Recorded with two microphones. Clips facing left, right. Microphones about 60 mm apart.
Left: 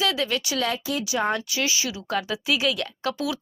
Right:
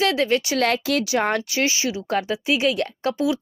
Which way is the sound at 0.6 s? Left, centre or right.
Right.